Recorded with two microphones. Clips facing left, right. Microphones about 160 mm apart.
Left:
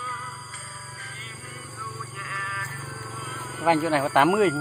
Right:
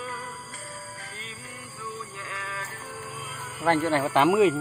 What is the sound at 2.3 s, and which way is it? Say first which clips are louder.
Music: even; 25° right (ahead or behind).